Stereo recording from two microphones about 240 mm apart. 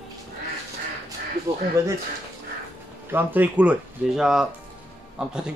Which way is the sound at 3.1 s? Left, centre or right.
Centre.